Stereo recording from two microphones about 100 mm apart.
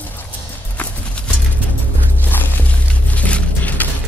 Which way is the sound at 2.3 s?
15° left (ahead or behind).